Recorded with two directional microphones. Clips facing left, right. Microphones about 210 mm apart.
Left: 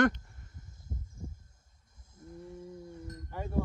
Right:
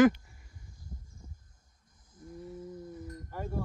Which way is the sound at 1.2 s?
25° left (ahead or behind).